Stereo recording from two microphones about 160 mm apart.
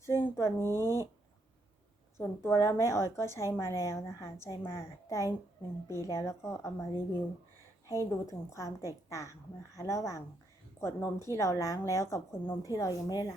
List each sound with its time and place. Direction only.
0.3 s speech: 15° left (ahead or behind)
2.1 s a woman's voice: 15° left (ahead or behind)